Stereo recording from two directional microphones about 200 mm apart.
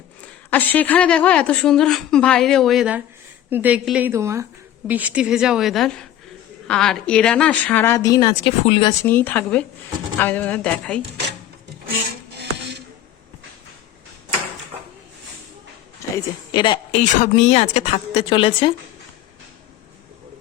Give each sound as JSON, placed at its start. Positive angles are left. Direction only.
{"t": 0.5, "sound": "a woman's voice", "side_deg": 10}
{"t": 8.9, "sound": "speech", "side_deg": 10}
{"t": 16.1, "sound": "a woman's voice", "side_deg": 20}
{"t": 17.0, "sound": "speech", "side_deg": 35}